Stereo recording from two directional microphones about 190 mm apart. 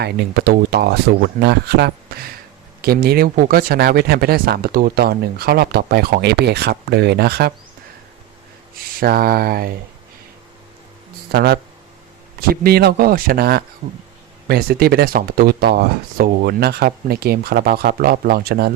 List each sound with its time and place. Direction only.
0.0 s speech: 60° right (ahead or behind)
8.8 s speech: 50° right (ahead or behind)
11.3 s speech: 55° right (ahead or behind)